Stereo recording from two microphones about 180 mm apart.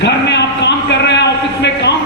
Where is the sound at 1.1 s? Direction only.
70° left (ahead or behind).